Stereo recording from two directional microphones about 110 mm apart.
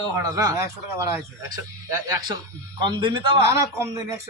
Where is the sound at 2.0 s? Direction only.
40° right (ahead or behind).